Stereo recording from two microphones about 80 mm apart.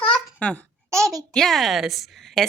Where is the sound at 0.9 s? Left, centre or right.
Right.